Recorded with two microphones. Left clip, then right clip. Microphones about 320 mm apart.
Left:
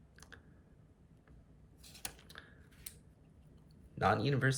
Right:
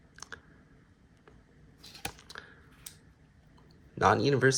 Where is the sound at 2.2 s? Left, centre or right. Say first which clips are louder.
Right 8 dB; centre.